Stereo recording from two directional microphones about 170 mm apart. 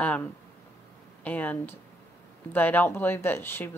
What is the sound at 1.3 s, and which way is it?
Speech, 10° left (ahead or behind).